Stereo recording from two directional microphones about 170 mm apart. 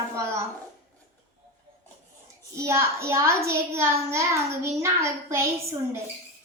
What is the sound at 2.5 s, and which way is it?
A child's voice, 15° right (ahead or behind).